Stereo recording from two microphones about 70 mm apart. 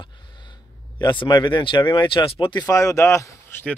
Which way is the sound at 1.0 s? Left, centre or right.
Left.